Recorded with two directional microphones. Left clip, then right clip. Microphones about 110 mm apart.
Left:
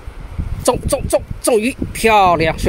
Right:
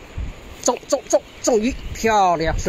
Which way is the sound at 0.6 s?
80° left.